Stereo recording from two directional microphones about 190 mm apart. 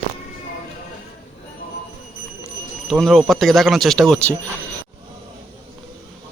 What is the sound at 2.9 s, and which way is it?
Speech, centre (ahead or behind).